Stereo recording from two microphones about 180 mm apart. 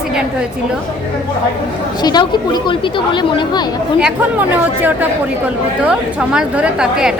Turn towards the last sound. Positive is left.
turn(degrees=-5)  # may be behind; listen again after turning